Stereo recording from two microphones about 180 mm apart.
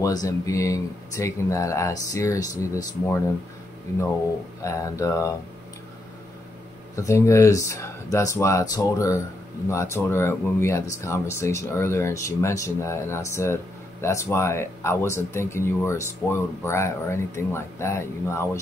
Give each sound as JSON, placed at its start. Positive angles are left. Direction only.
{"t": 0.0, "sound": "speech", "side_deg": 20}
{"t": 4.6, "sound": "speech", "side_deg": 20}
{"t": 7.0, "sound": "speech", "side_deg": 15}